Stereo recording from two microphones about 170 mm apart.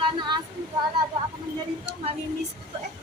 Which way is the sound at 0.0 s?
25° right (ahead or behind).